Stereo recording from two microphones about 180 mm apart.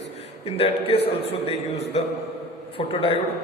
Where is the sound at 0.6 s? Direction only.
30° left (ahead or behind).